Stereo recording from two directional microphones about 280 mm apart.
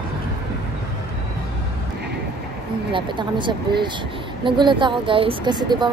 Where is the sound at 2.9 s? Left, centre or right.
Centre.